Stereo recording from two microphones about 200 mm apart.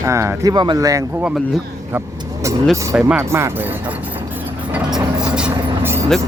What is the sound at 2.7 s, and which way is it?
Speech, 15° right (ahead or behind).